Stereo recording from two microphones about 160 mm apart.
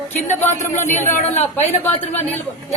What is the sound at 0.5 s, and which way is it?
Speech, 50° left (ahead or behind).